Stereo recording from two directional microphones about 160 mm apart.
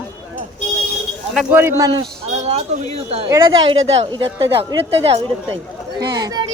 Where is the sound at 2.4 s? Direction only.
40° right (ahead or behind).